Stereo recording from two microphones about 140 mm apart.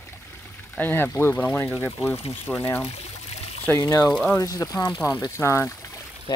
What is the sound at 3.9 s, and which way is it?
Speech, 25° left (ahead or behind).